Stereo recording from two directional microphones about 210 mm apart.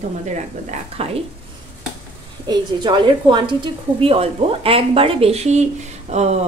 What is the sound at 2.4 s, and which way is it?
A woman's voice, 20° right (ahead or behind).